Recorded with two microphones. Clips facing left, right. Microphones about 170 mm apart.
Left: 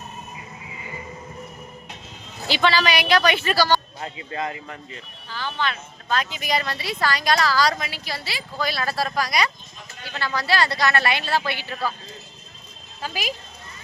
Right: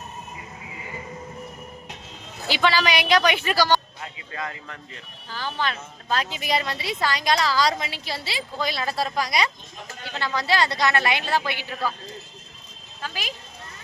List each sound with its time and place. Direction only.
2.5 s speech: 10° right (ahead or behind)
4.0 s speech: 30° left (ahead or behind)
5.3 s speech: 40° right (ahead or behind); by 11.6 s 15° right (ahead or behind)
13.0 s speech: 10° left (ahead or behind)